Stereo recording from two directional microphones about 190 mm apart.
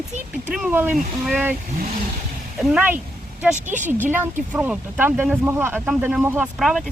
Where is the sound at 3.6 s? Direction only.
40° right (ahead or behind).